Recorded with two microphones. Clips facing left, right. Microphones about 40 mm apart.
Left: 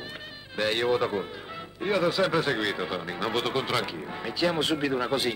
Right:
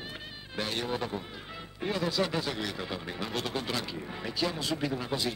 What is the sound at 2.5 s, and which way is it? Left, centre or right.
A man's voice, left.